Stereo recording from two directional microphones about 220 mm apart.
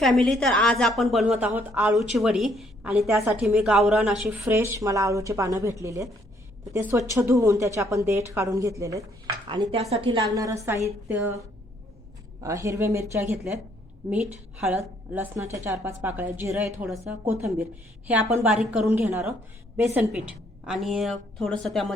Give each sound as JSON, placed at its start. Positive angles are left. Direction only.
{"t": 0.0, "sound": "a woman's voice", "side_deg": 0}
{"t": 12.4, "sound": "a woman's voice", "side_deg": -15}